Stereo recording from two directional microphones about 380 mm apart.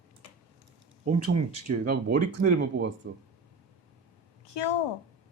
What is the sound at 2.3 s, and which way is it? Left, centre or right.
Speech, right.